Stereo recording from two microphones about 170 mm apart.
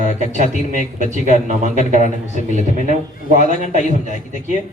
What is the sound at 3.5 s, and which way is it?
Speech, 45° right (ahead or behind).